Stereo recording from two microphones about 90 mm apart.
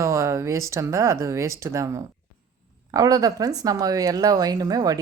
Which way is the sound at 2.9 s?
45° right (ahead or behind).